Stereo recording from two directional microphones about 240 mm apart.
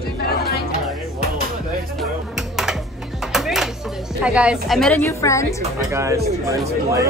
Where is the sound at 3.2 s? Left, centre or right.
Centre.